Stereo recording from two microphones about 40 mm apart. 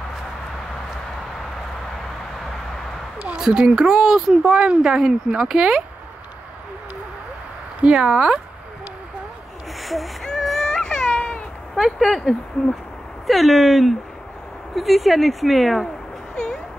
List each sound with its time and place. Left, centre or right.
3.3 s speech: centre
4.6 s speech: right
7.8 s speech: right
9.8 s a sound: centre
10.4 s baby cry: centre
10.7 s baby cry: left
11.7 s speech: centre